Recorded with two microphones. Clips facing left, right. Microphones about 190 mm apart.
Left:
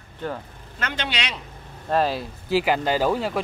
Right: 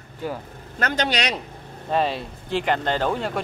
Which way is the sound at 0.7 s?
45° right (ahead or behind).